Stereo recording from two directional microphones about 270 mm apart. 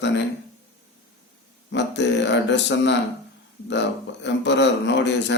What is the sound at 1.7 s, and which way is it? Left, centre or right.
Speech, left.